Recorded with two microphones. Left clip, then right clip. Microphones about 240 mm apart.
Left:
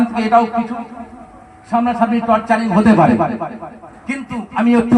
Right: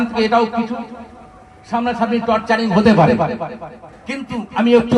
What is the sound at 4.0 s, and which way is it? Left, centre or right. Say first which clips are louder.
Speech: left 1 dB; right.